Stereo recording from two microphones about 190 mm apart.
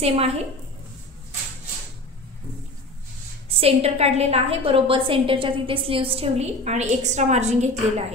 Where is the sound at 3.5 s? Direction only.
30° right (ahead or behind).